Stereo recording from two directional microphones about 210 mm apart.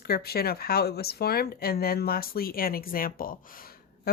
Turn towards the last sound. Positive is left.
turn(degrees=50)  # may be behind; listen again after turning